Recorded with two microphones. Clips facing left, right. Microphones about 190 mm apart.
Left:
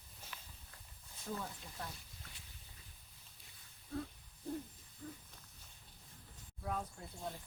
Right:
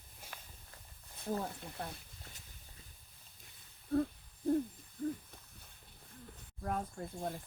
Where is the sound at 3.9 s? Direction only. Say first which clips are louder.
Right 11 dB; 55° right (ahead or behind).